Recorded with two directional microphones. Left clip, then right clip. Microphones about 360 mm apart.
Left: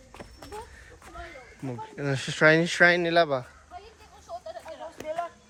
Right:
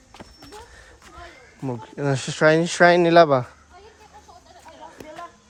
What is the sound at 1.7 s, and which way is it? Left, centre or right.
Speech, centre.